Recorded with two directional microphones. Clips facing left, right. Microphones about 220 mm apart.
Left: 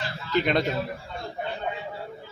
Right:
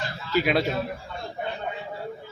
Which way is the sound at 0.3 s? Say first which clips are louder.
Right 1 dB; 5° right (ahead or behind).